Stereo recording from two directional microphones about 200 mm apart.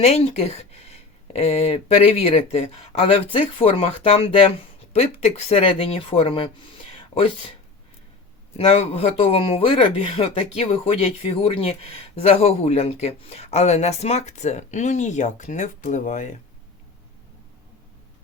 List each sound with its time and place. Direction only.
0.0 s speech: 30° left (ahead or behind)
6.9 s a sound: 25° left (ahead or behind)
8.5 s speech: 30° left (ahead or behind)